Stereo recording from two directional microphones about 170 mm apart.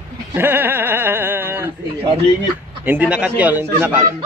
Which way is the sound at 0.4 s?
10° right (ahead or behind).